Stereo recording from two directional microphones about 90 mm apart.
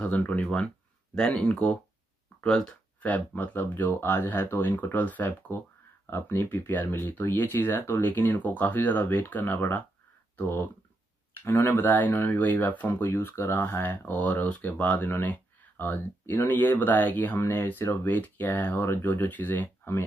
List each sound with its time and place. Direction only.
0.0 s speech: 20° left (ahead or behind)
3.1 s speech: 20° left (ahead or behind)